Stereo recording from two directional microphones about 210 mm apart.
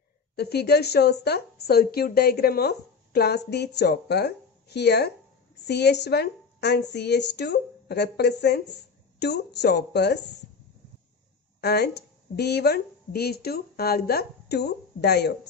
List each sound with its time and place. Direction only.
0.4 s speech: 50° left (ahead or behind)
11.6 s speech: 50° left (ahead or behind)